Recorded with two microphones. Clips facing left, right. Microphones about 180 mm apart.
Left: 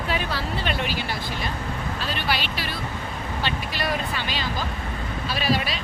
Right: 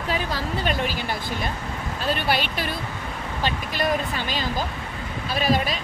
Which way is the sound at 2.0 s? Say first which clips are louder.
Right 5 dB; 50° right (ahead or behind).